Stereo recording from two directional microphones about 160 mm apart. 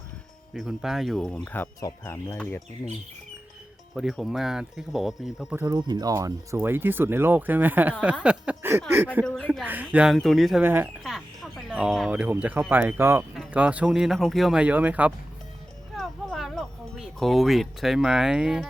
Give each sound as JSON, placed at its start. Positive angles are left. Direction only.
{"t": 0.5, "sound": "speech", "side_deg": 0}
{"t": 3.9, "sound": "speech", "side_deg": 0}
{"t": 5.5, "sound": "speech", "side_deg": -25}
{"t": 9.2, "sound": "speech", "side_deg": 5}
{"t": 9.5, "sound": "speech", "side_deg": -10}
{"t": 10.6, "sound": "speech", "side_deg": -10}
{"t": 11.0, "sound": "speech", "side_deg": 0}
{"t": 16.0, "sound": "a sound", "side_deg": 0}